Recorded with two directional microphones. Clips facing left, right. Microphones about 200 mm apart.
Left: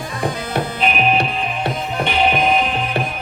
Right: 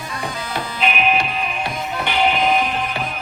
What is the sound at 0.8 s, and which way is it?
Music, 35° left (ahead or behind).